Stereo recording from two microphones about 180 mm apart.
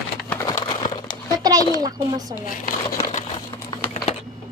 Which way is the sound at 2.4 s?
45° left (ahead or behind).